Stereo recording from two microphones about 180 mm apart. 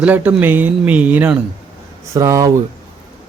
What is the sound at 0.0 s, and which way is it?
A man's voice, 10° right (ahead or behind).